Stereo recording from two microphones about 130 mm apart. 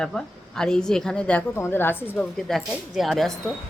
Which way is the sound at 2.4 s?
Centre (ahead or behind).